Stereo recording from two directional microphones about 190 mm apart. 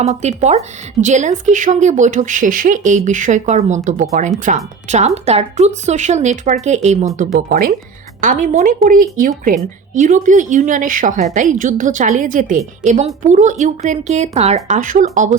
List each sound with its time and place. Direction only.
0.0 s a woman's voice: 35° right (ahead or behind)